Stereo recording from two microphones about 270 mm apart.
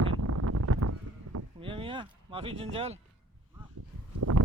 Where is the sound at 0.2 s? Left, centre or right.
Right.